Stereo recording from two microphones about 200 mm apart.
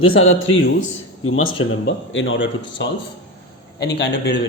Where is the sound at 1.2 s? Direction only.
90° left.